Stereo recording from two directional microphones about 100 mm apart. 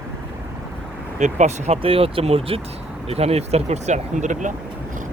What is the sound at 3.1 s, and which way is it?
Speech, 90° right.